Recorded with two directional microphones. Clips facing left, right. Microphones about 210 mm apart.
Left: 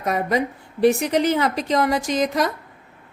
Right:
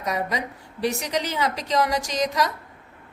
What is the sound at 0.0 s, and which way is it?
A woman's voice, 55° left (ahead or behind).